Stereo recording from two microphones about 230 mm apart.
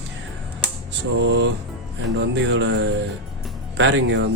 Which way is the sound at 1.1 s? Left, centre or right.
Right.